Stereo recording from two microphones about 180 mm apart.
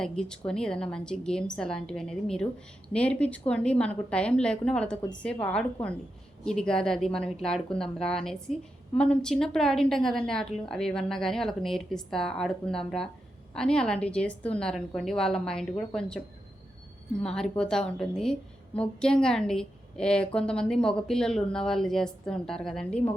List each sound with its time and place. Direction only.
0.0 s a woman's voice: 5° left (ahead or behind)
17.2 s a woman's voice: 5° left (ahead or behind)